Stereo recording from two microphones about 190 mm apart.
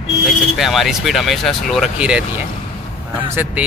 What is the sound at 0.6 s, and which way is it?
Speech, centre (ahead or behind).